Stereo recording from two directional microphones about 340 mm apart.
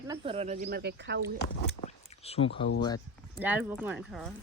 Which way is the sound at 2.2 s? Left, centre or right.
Centre.